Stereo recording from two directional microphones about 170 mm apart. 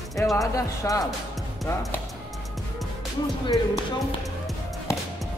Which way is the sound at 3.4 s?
25° left (ahead or behind).